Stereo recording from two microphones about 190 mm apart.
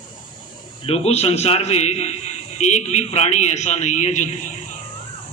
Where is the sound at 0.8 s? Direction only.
30° left (ahead or behind).